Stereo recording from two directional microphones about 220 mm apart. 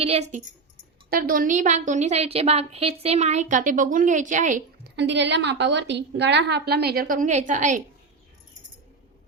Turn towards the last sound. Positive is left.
turn(degrees=-35)  # may be behind; listen again after turning